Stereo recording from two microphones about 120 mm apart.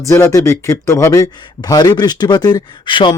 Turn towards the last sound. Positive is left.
turn(degrees=40)  # may be behind; listen again after turning